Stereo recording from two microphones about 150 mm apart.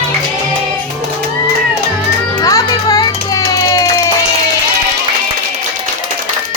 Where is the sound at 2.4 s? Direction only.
25° left (ahead or behind).